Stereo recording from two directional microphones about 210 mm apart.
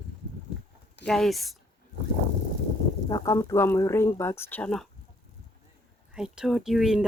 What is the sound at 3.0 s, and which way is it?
Speech, 15° left (ahead or behind).